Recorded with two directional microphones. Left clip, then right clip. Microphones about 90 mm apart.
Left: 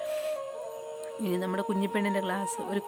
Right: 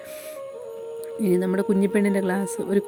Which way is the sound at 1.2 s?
35° right (ahead or behind).